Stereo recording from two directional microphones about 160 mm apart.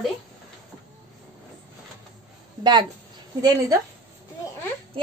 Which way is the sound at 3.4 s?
25° right (ahead or behind).